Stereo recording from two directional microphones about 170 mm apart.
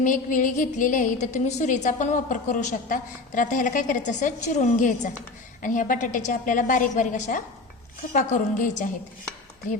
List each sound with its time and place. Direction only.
0.0 s a woman's voice: 50° left (ahead or behind)